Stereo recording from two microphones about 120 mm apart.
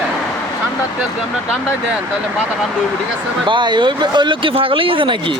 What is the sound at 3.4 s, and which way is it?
Speech, 40° right (ahead or behind).